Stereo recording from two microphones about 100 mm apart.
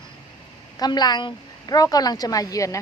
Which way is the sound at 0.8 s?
45° left (ahead or behind).